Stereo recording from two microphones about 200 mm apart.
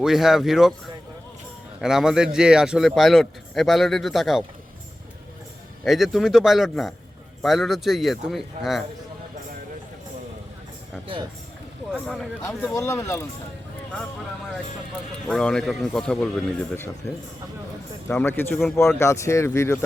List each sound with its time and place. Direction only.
0.0 s a man's voice: centre (ahead or behind)
1.8 s a man's voice: centre (ahead or behind)
5.8 s a man's voice: centre (ahead or behind)
11.0 s speech: 25° right (ahead or behind)
11.9 s a man's voice: centre (ahead or behind)
12.4 s speech: 15° left (ahead or behind)
15.3 s a man's voice: 5° left (ahead or behind)
18.1 s speech: 10° left (ahead or behind)